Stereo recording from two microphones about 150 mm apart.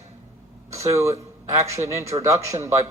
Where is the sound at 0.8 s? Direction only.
20° right (ahead or behind).